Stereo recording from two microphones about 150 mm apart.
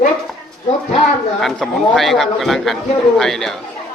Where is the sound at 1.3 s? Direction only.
Centre (ahead or behind).